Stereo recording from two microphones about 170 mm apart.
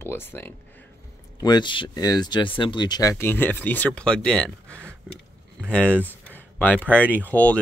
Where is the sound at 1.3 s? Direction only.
25° left (ahead or behind); by 6.1 s 5° left (ahead or behind).